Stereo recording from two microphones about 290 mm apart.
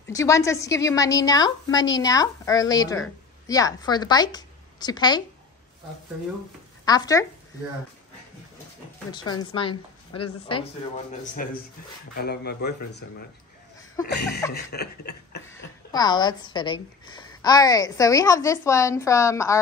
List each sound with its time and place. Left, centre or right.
0.1 s a woman's voice: centre
6.8 s speech: centre
9.1 s a woman's voice: centre
11.4 s a man's voice: left
14.5 s a man's voice: left
15.4 s a woman's voice: centre